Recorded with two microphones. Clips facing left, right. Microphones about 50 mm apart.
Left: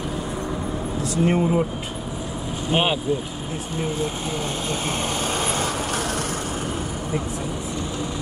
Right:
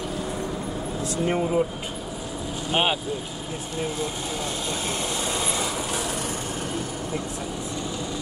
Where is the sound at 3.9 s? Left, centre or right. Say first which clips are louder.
Left 3 dB; left.